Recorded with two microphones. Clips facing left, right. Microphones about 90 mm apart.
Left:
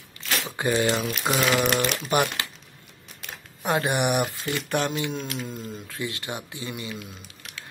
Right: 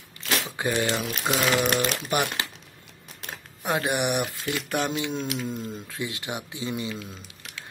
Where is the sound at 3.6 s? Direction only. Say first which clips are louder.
Left 2 dB; centre (ahead or behind); by 5.8 s 20° right (ahead or behind).